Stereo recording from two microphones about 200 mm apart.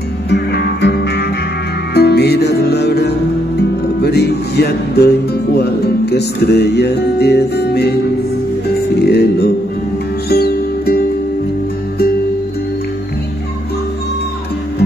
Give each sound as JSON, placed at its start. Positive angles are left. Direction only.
{"t": 0.3, "sound": "music", "side_deg": 55}
{"t": 9.0, "sound": "music", "side_deg": 55}